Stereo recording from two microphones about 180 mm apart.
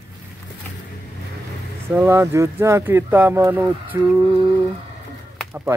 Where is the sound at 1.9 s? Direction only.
15° right (ahead or behind).